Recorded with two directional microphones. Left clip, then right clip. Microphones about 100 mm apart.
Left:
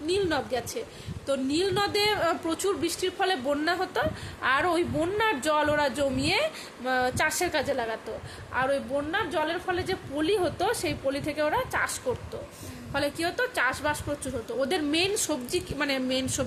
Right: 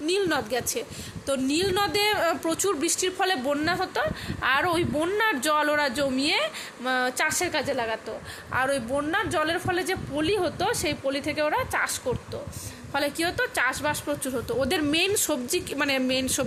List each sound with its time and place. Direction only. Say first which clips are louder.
0.0 s a woman's voice: right 2 dB; 45° right (ahead or behind)
3.5 s a woman's voice: right 1 dB; 20° right (ahead or behind)
4.4 s a man's voice: right 1 dB; 30° right (ahead or behind)
8.5 s a woman's voice: right 1 dB; 45° right (ahead or behind)
10.2 s a man's voice: even; 20° right (ahead or behind)